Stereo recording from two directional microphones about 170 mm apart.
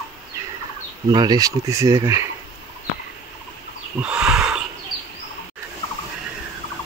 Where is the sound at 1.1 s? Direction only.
25° right (ahead or behind).